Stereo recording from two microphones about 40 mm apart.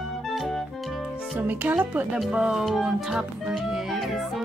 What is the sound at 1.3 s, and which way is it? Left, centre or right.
Speech, right.